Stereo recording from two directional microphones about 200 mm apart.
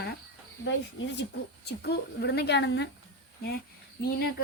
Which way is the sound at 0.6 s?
65° left (ahead or behind).